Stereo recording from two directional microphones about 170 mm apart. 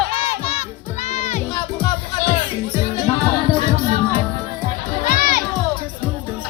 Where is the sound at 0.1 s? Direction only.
35° left (ahead or behind).